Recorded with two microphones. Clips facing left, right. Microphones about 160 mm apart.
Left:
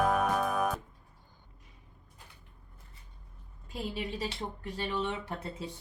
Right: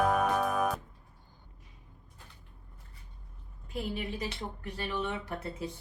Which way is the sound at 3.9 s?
30° left (ahead or behind).